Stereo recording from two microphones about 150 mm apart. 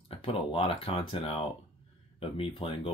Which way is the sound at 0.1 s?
40° left (ahead or behind).